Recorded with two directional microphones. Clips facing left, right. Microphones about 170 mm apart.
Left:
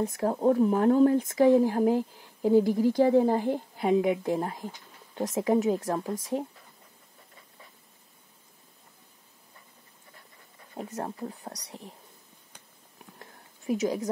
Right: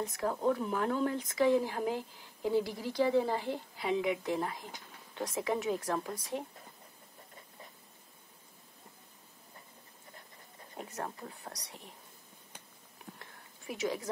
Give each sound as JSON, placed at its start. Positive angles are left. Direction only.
{"t": 0.0, "sound": "a woman's voice", "side_deg": 30}
{"t": 5.9, "sound": "speech", "side_deg": 20}
{"t": 10.9, "sound": "speech", "side_deg": 25}
{"t": 13.7, "sound": "speech", "side_deg": 40}